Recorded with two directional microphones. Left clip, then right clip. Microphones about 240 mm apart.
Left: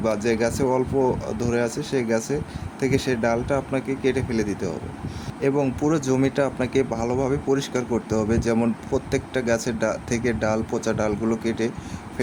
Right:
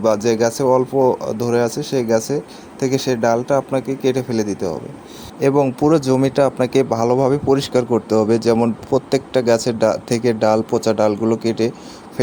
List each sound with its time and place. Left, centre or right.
0.0 s speech: centre